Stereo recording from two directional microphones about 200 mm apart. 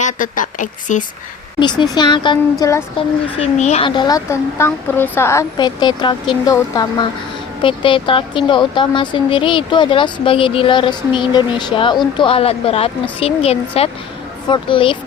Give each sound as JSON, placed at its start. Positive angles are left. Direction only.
{"t": 0.0, "sound": "speech", "side_deg": 40}
{"t": 1.5, "sound": "a woman's voice", "side_deg": 20}
{"t": 3.3, "sound": "a woman's voice", "side_deg": 35}